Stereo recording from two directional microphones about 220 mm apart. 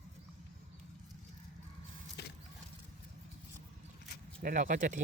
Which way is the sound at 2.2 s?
50° left (ahead or behind).